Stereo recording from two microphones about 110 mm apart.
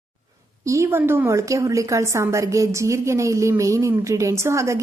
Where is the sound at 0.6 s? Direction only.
25° right (ahead or behind).